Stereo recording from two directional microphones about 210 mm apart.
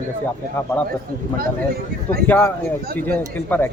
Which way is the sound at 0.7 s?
10° left (ahead or behind).